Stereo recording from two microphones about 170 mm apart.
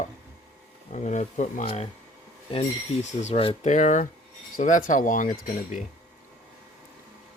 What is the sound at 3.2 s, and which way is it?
Speech, 35° left (ahead or behind).